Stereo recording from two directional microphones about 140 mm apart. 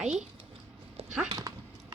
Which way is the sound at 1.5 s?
25° right (ahead or behind).